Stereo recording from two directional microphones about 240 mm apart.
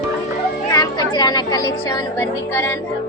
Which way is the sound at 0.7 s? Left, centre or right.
Centre.